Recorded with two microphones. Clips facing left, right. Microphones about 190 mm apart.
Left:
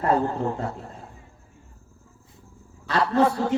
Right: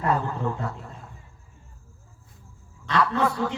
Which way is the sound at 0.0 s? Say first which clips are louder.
Left 3 dB; 35° left (ahead or behind).